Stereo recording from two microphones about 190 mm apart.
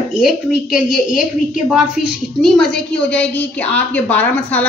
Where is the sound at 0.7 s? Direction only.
5° right (ahead or behind).